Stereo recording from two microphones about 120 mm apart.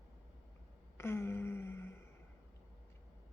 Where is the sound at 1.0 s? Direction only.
20° left (ahead or behind).